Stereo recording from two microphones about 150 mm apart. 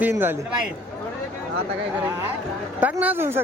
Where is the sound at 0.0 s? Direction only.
15° right (ahead or behind).